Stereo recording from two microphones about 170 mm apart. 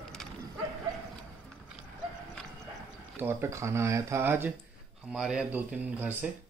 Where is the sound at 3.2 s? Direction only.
15° right (ahead or behind).